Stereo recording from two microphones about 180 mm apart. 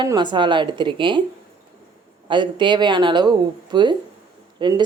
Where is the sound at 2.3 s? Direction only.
25° right (ahead or behind).